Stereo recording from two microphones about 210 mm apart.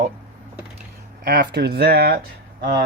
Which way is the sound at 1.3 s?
50° right (ahead or behind).